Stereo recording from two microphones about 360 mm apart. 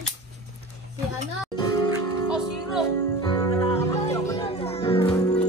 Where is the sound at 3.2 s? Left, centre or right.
Centre.